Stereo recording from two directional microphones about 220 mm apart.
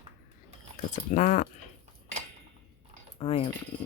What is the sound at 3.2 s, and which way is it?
Speech, 25° left (ahead or behind).